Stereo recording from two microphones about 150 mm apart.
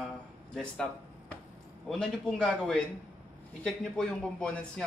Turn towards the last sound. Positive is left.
turn(degrees=5)  # may be behind; listen again after turning